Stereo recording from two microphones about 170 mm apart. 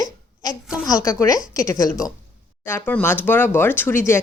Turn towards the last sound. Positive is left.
turn(degrees=10)  # may be behind; listen again after turning